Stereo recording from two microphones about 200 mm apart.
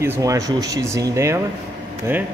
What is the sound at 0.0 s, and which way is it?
Speech, 15° right (ahead or behind).